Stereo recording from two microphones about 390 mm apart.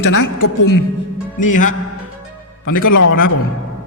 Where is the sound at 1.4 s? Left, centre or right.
Centre.